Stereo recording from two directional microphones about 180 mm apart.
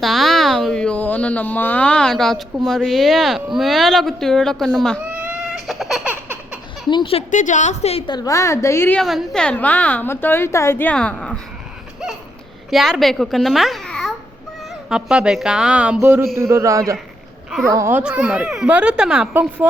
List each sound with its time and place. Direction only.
0.0 s a child's voice: centre (ahead or behind)
5.1 s baby cry: 5° right (ahead or behind)
6.9 s a woman's voice: 30° left (ahead or behind)
7.3 s a woman's voice: 45° left (ahead or behind); by 9.0 s 15° left (ahead or behind)
9.0 s a woman's voice: centre (ahead or behind)
12.7 s a child's voice: centre (ahead or behind)